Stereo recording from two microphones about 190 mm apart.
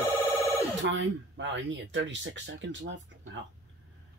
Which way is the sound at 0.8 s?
75° right (ahead or behind).